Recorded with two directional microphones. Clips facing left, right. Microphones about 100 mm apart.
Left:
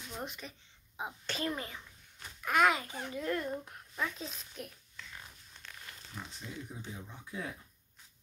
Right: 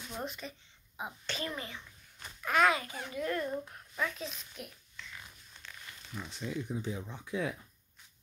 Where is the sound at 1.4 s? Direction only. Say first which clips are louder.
Left 4 dB; 35° left (ahead or behind).